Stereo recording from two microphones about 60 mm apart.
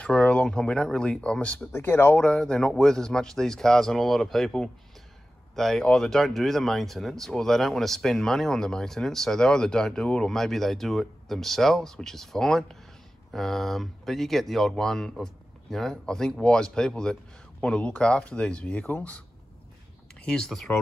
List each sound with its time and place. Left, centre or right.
0.0 s speech: centre
1.7 s speech: left
2.3 s speech: centre
20.2 s speech: centre